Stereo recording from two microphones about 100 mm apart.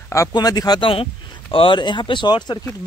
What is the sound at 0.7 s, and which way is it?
A man's voice, 65° left (ahead or behind).